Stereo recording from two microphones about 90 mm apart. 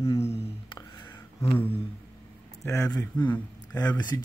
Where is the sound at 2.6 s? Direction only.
35° left (ahead or behind).